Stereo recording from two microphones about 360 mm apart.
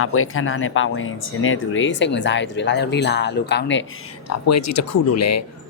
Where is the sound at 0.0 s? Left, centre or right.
Left.